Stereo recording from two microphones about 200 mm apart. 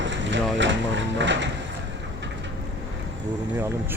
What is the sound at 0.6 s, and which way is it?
Speech, 65° right (ahead or behind).